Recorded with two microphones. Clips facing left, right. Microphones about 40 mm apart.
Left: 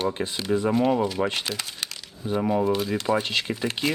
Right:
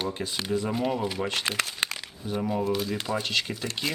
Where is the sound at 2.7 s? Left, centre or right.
Centre.